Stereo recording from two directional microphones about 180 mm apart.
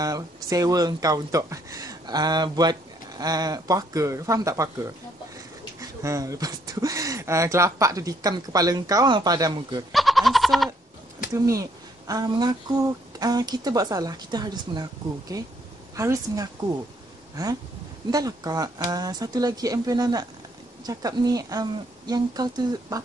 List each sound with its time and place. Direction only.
0.0 s speech: 20° right (ahead or behind)
9.9 s goat: centre (ahead or behind)
11.3 s a woman's voice: 15° right (ahead or behind)
18.1 s speech: 20° right (ahead or behind)